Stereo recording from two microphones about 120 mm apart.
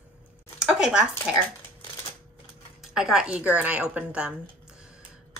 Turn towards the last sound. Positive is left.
turn(degrees=-5)  # may be behind; listen again after turning